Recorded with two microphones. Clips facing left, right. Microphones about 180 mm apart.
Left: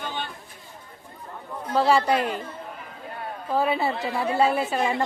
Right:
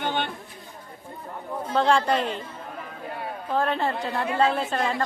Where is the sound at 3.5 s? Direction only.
5° left (ahead or behind).